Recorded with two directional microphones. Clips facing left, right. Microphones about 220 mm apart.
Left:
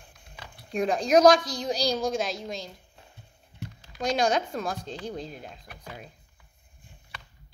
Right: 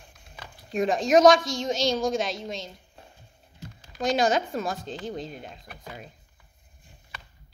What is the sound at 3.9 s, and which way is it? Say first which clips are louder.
Speech: right 2 dB; centre (ahead or behind).